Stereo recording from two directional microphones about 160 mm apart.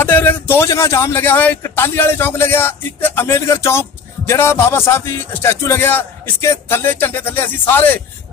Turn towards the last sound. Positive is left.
turn(degrees=10)  # may be behind; listen again after turning